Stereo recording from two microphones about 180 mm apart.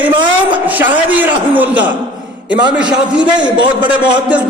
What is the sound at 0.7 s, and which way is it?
A man's voice, 10° right (ahead or behind).